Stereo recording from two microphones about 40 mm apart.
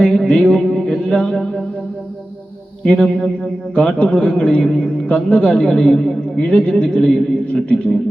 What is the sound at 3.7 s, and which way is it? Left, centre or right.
Speech, left.